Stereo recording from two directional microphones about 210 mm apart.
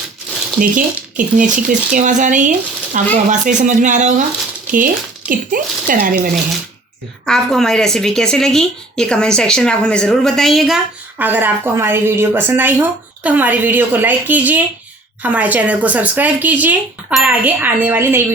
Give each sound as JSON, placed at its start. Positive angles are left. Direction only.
{"t": 0.6, "sound": "speech", "side_deg": -40}
{"t": 5.3, "sound": "speech", "side_deg": -40}
{"t": 7.3, "sound": "a woman's voice", "side_deg": 0}